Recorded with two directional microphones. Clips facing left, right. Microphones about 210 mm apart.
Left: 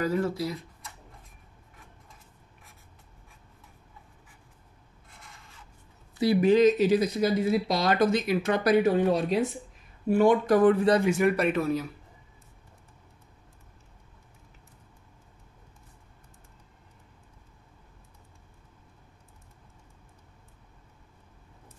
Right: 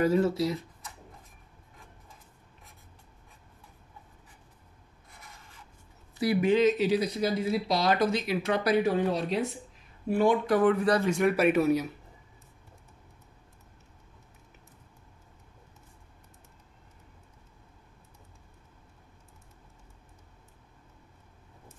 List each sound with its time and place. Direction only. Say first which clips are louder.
0.0 s speech: right 3 dB; 25° right (ahead or behind)
6.4 s speech: left 4 dB; 40° left (ahead or behind)
11.1 s a man's voice: left 2 dB; 5° left (ahead or behind)
11.3 s speech: right 3 dB; 10° right (ahead or behind)